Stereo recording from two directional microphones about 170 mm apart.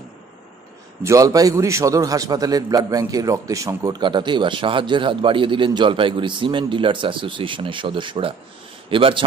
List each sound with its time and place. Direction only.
1.0 s a man's voice: 20° right (ahead or behind)